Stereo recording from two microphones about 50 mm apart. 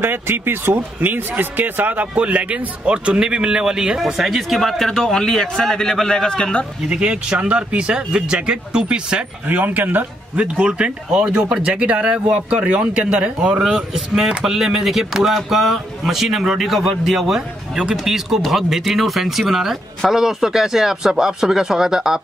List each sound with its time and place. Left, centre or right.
0.0 s speech: right; by 4.0 s centre
4.0 s speech: centre
6.9 s speech: centre
9.5 s speech: right
10.3 s speech: right